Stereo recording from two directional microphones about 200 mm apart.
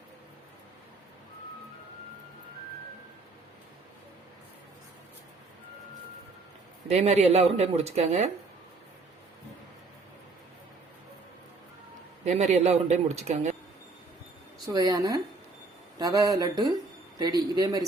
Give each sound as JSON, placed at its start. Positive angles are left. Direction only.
{"t": 6.8, "sound": "speech", "side_deg": -35}
{"t": 12.2, "sound": "speech", "side_deg": -35}
{"t": 14.7, "sound": "speech", "side_deg": -20}